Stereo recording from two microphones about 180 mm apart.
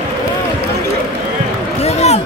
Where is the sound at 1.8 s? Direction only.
35° left (ahead or behind).